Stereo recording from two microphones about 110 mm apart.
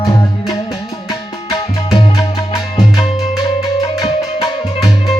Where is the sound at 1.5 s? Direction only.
50° left (ahead or behind).